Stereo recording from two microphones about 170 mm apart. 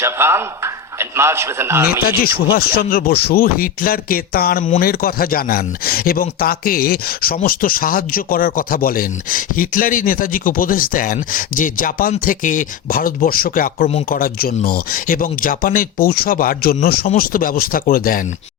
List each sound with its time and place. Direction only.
0.0 s a man's voice: 15° right (ahead or behind)
2.0 s speech: 60° left (ahead or behind)